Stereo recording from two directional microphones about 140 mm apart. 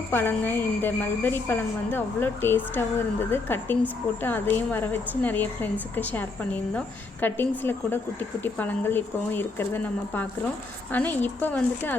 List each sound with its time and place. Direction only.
0.1 s a woman's voice: 15° left (ahead or behind)